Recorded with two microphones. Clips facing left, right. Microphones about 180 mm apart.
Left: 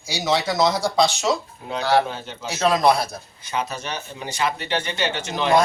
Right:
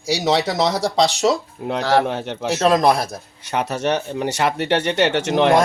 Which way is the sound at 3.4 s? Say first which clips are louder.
Right 7 dB; 70° right (ahead or behind).